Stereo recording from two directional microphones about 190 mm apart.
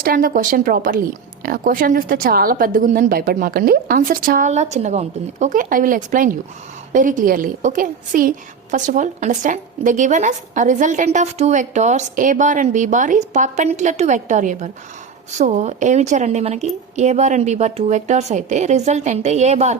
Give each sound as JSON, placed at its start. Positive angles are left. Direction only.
{"t": 0.0, "sound": "a woman's voice", "side_deg": -50}